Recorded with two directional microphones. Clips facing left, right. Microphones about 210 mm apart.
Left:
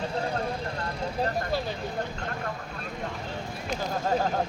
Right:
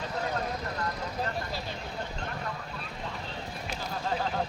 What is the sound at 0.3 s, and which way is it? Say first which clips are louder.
Vehicle: left 2 dB; 30° left (ahead or behind).